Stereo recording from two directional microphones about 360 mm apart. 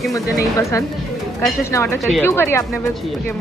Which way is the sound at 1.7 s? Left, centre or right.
Centre.